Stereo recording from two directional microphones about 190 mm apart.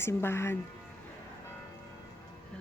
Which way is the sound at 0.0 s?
15° left (ahead or behind).